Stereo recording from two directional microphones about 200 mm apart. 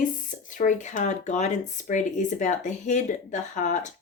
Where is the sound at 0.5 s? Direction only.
40° left (ahead or behind).